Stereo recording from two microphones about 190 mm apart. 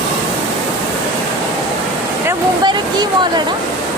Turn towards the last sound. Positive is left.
turn(degrees=-25)  # may be behind; listen again after turning